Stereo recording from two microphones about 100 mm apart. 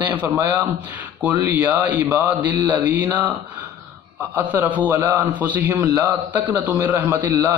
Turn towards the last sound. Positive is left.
turn(degrees=-20)  # may be behind; listen again after turning